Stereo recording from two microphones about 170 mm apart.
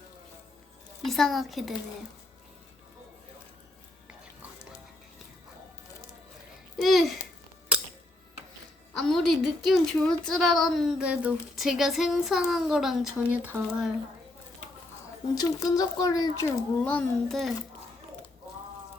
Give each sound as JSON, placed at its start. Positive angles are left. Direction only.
{"t": 1.0, "sound": "a woman's voice", "side_deg": 0}
{"t": 6.7, "sound": "a child's voice", "side_deg": 0}
{"t": 8.9, "sound": "a woman's voice", "side_deg": 0}
{"t": 15.4, "sound": "speech", "side_deg": 20}
{"t": 16.8, "sound": "a woman's voice", "side_deg": 5}